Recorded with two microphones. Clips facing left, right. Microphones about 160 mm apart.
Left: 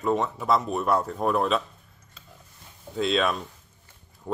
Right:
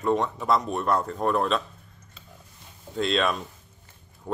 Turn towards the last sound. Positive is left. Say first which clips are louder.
# even
turn(degrees=0)  # may be behind; listen again after turning